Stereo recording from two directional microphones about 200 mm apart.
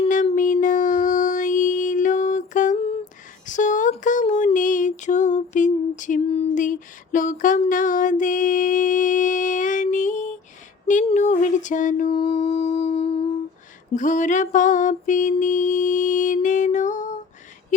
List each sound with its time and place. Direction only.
0.0 s a sound: 35° left (ahead or behind)
12.2 s music: 35° left (ahead or behind)
13.9 s mantra: 40° left (ahead or behind)